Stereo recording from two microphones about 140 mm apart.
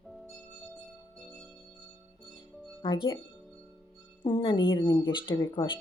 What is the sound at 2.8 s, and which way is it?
Speech, 35° left (ahead or behind).